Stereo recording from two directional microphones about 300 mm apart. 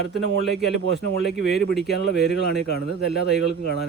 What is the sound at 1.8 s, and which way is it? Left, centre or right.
Speech, left.